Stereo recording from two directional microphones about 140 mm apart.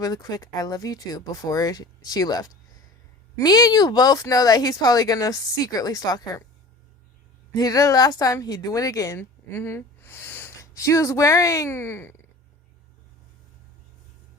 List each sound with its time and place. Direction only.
0.0 s speech: 25° left (ahead or behind)
7.5 s speech: 25° left (ahead or behind)